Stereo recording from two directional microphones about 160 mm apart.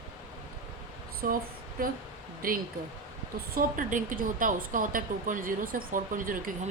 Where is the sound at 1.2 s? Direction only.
65° right (ahead or behind).